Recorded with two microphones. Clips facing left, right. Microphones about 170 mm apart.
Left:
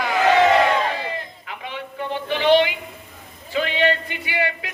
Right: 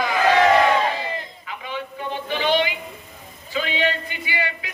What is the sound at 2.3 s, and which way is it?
Speech, 65° left (ahead or behind).